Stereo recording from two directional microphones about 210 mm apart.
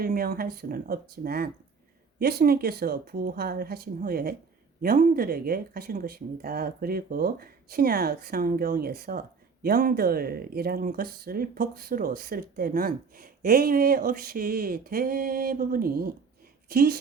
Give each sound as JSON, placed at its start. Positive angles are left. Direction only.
{"t": 0.0, "sound": "speech", "side_deg": -45}